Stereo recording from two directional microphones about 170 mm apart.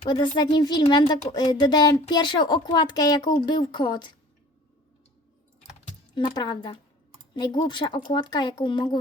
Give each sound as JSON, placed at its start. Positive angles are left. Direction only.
{"t": 0.0, "sound": "speech", "side_deg": 25}
{"t": 6.1, "sound": "speech", "side_deg": 25}